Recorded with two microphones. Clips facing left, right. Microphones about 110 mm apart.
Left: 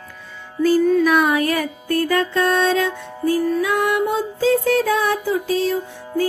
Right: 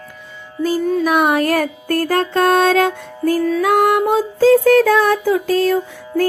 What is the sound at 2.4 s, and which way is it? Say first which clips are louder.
Music: right 5 dB; 55° right (ahead or behind).